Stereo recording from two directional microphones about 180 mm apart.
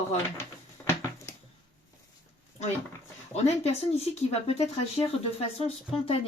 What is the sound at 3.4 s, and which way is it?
Speech, 35° left (ahead or behind).